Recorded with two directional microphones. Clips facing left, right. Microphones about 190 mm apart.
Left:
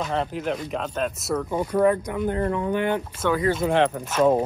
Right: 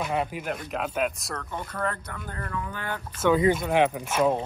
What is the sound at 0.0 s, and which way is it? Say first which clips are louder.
Speech: left 3 dB; 10° right (ahead or behind).